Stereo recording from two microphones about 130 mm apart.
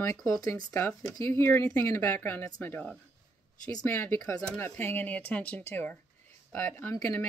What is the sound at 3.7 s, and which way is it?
Speech, 25° left (ahead or behind).